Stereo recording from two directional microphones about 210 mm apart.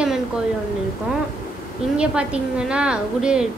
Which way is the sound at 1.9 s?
5° right (ahead or behind).